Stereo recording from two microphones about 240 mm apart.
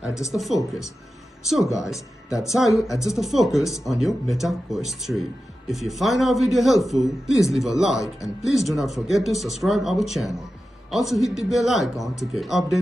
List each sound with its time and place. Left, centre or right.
0.3 s speech: centre